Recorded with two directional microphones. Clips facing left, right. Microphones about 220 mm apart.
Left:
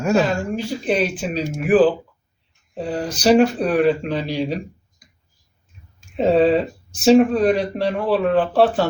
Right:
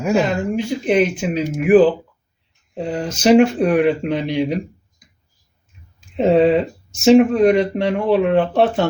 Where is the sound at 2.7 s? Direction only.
25° right (ahead or behind).